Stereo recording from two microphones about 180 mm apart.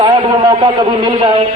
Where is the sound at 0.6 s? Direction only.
30° right (ahead or behind).